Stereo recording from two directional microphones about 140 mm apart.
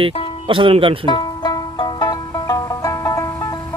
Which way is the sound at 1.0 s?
35° left (ahead or behind).